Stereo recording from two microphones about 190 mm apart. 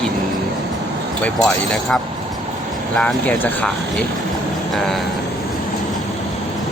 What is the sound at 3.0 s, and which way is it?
Speech, 5° left (ahead or behind).